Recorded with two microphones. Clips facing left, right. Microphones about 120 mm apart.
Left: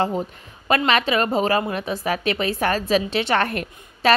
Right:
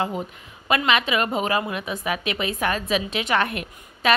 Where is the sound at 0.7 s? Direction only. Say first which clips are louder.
Left 2 dB; 40° left (ahead or behind).